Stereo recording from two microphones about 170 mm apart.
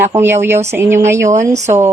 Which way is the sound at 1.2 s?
45° right (ahead or behind).